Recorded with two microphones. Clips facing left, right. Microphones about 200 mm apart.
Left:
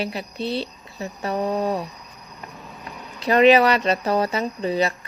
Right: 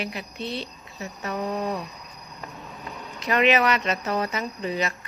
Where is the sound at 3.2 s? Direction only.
35° left (ahead or behind).